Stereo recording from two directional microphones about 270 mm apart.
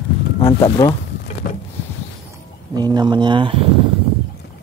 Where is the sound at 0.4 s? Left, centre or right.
Centre.